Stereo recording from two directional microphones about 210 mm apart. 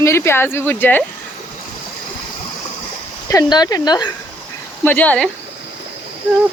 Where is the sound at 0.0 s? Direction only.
10° left (ahead or behind).